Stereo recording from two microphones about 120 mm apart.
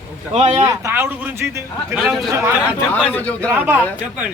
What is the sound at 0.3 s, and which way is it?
Speech, 70° right (ahead or behind).